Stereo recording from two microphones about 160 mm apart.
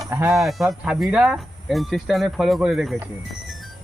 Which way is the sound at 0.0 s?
20° right (ahead or behind).